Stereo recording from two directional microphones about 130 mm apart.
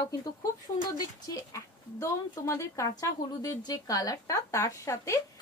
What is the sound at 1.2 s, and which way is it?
A woman's voice, 25° left (ahead or behind).